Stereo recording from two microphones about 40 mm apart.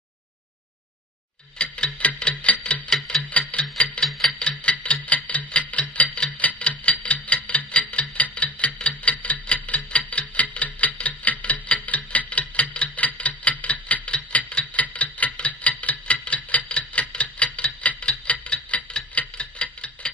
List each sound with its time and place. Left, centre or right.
1.6 s clock: left
2.9 s clock: centre
3.3 s clock: left
4.1 s a sound: centre
4.5 s clock: left